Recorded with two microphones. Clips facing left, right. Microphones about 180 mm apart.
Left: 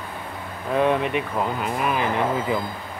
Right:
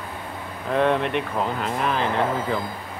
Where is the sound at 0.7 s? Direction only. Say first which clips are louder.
Even; 5° left (ahead or behind).